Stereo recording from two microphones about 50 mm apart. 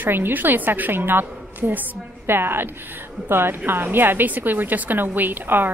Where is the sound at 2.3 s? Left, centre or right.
Right.